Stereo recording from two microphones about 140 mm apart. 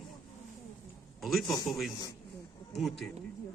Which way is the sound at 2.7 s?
Centre (ahead or behind).